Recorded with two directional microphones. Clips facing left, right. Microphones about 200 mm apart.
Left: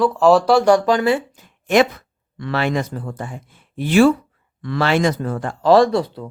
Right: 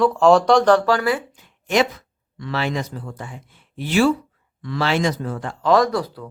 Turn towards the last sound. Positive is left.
turn(degrees=25)  # may be behind; listen again after turning